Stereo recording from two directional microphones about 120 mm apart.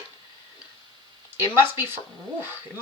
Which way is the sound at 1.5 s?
20° right (ahead or behind).